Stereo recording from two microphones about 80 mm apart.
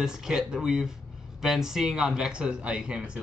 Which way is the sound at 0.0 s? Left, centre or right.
Centre.